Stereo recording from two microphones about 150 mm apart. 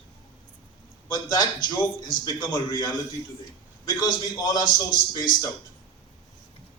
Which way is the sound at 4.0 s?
25° left (ahead or behind).